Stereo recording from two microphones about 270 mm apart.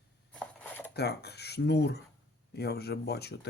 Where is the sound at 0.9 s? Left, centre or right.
Left.